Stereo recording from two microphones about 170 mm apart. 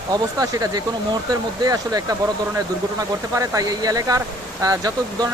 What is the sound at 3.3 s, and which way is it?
Speech, 20° right (ahead or behind).